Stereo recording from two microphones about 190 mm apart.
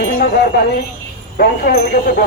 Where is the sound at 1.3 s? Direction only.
55° left (ahead or behind).